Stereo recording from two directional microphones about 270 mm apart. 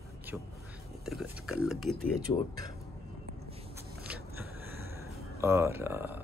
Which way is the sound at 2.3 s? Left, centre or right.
Centre.